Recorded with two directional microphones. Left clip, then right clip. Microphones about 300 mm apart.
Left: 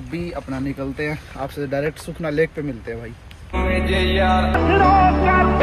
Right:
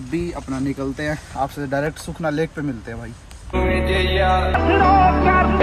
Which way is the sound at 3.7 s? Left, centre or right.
Centre.